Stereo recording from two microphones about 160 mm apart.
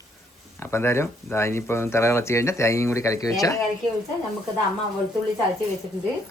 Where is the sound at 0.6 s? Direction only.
15° left (ahead or behind).